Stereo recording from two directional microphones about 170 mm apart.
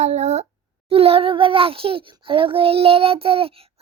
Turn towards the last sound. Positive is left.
turn(degrees=-35)  # may be behind; listen again after turning